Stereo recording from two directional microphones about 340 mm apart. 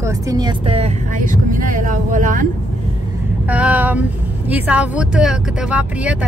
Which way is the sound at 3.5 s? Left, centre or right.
Centre.